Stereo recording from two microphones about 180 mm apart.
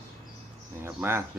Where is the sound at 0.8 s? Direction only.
15° right (ahead or behind).